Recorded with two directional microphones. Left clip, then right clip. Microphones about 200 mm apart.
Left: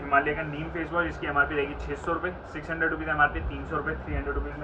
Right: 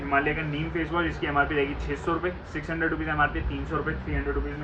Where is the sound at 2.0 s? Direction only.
15° right (ahead or behind).